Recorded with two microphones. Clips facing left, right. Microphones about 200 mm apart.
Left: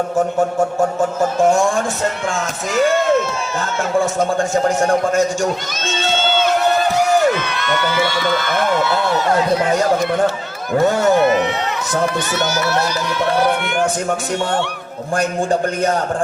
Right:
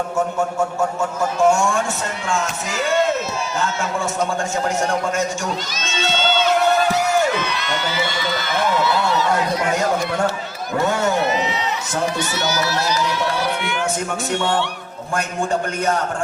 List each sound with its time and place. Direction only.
0.3 s a man's voice: 30° left (ahead or behind)
7.3 s speech: 55° left (ahead or behind)
15.1 s a man's voice: 35° left (ahead or behind)